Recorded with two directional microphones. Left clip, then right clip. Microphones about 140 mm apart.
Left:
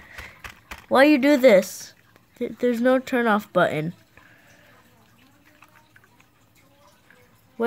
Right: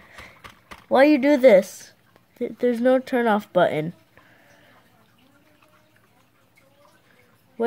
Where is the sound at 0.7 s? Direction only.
Centre (ahead or behind).